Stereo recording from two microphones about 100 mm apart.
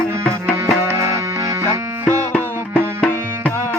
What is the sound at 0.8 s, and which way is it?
Music, 30° right (ahead or behind).